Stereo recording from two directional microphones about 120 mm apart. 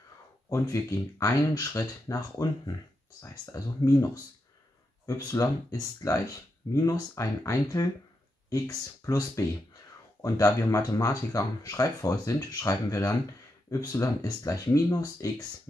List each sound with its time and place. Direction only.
0.5 s speech: 25° left (ahead or behind)